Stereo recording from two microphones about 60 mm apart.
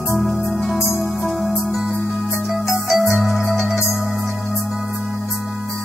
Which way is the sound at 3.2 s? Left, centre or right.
Centre.